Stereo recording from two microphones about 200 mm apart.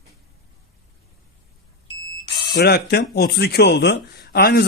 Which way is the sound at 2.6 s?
55° left (ahead or behind).